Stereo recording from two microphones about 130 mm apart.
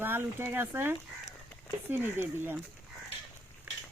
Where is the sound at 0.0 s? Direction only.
15° right (ahead or behind).